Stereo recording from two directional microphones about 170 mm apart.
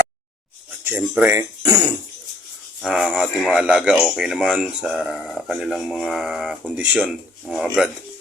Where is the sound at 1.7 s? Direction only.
25° right (ahead or behind).